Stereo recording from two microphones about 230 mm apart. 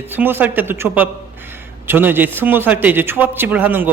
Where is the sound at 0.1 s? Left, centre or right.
Centre.